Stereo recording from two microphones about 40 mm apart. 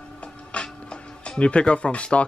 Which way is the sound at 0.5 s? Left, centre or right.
Left.